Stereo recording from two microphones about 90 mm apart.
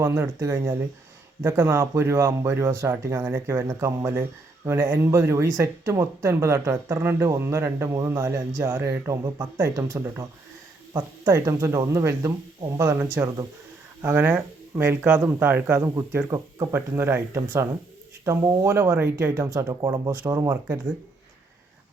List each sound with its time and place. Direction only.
0.0 s speech: 30° right (ahead or behind)
14.0 s speech: 20° right (ahead or behind)